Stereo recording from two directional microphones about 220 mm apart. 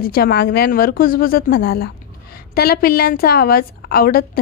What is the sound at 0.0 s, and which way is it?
A woman's voice, 45° left (ahead or behind).